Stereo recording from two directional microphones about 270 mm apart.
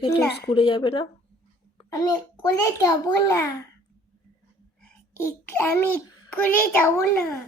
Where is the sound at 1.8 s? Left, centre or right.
Centre.